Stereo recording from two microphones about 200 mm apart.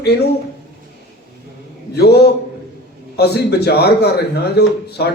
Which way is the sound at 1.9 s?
55° left (ahead or behind).